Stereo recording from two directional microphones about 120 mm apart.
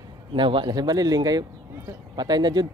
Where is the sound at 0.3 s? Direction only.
45° right (ahead or behind).